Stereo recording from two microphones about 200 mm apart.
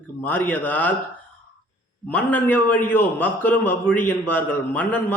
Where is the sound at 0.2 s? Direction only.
10° left (ahead or behind).